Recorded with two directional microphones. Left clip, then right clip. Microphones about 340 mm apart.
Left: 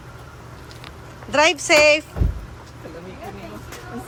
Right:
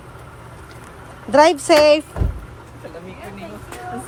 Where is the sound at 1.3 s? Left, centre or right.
Centre.